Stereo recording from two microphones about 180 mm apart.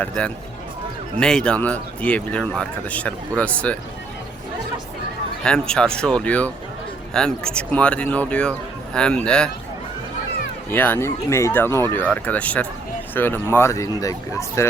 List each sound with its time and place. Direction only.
0.2 s a man's voice: 5° left (ahead or behind)
5.4 s a man's voice: 5° left (ahead or behind)
10.7 s speech: 10° left (ahead or behind)